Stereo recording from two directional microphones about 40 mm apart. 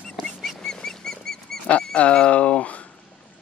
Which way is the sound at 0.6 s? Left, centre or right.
Centre.